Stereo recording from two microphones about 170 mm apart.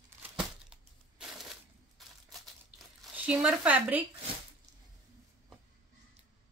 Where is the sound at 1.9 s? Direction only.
Centre (ahead or behind).